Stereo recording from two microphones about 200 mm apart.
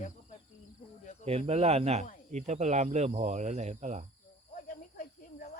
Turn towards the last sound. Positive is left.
turn(degrees=40)  # may be behind; listen again after turning